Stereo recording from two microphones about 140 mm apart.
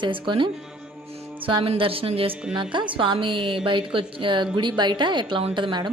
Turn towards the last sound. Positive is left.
turn(degrees=-35)  # may be behind; listen again after turning